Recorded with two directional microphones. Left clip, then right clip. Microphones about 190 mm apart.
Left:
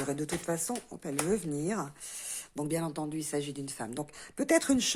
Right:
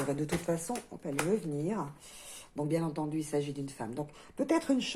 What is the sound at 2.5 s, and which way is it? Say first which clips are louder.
Speech: right 1 dB; 35° left (ahead or behind).